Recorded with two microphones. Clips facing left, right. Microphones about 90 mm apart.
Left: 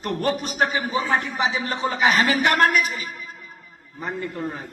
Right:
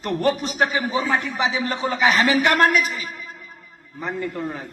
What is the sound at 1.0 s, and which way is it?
A man's voice, 45° left (ahead or behind).